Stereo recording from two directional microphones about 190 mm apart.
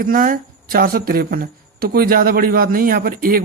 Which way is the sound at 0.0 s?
50° right (ahead or behind).